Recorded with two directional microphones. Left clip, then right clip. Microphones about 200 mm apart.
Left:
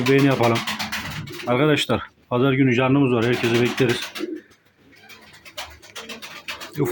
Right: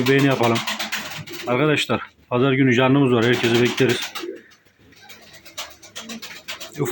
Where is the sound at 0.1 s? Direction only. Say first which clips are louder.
Even; centre (ahead or behind).